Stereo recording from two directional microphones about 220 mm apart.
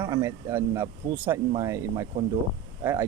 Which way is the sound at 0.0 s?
10° right (ahead or behind).